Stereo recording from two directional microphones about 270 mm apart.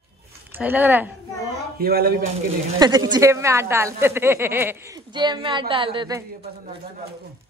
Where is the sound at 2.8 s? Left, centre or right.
Centre.